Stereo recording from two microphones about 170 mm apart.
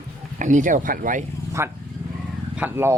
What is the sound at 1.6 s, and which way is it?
Speech, 15° right (ahead or behind).